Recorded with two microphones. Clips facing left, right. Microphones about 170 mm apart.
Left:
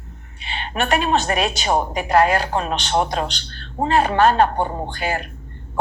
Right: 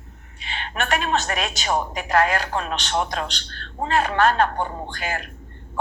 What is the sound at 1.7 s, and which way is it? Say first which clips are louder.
Speech: left 3 dB; 30° left (ahead or behind).